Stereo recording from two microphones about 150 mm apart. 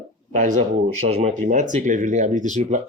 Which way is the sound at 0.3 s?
60° right (ahead or behind).